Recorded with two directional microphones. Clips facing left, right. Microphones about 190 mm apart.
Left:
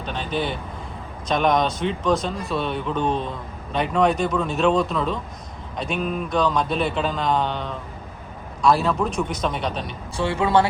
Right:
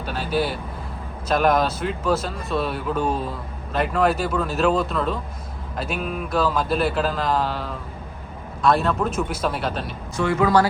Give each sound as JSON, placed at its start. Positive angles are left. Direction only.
{"t": 0.0, "sound": "speech", "side_deg": -5}
{"t": 10.2, "sound": "speech", "side_deg": 30}